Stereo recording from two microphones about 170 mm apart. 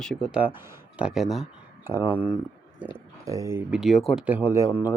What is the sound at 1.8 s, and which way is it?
Speech, 10° right (ahead or behind).